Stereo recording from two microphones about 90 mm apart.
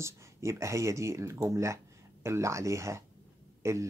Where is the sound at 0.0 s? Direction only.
35° right (ahead or behind).